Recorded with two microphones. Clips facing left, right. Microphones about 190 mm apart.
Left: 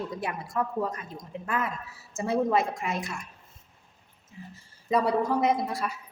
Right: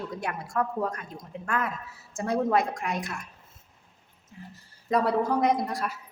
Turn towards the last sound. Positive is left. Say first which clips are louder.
# even
turn(degrees=0)  # may be behind; listen again after turning